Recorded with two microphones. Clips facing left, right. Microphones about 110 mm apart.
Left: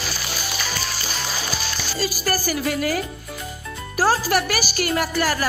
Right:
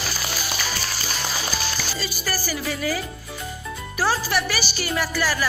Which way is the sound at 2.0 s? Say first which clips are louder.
Left 5 dB; 45° left (ahead or behind).